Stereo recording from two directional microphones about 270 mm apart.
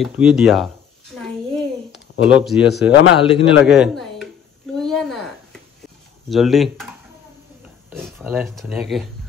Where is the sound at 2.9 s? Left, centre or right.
Left.